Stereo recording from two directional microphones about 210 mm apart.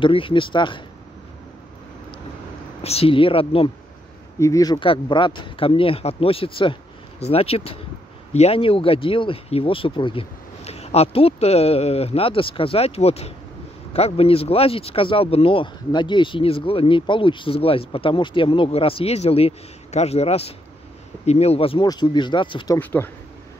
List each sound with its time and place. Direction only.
0.0 s speech: 25° left (ahead or behind)
2.8 s speech: 30° left (ahead or behind)
4.4 s speech: 15° left (ahead or behind)
22.8 s speech: 10° left (ahead or behind)